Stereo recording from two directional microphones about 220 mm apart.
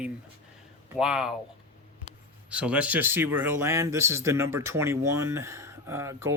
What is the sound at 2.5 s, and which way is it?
Speech, 5° right (ahead or behind).